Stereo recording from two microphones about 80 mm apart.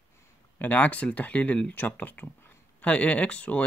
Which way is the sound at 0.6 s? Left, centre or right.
Centre.